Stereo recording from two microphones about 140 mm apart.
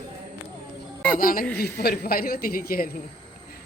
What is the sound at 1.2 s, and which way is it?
Speech, 90° left.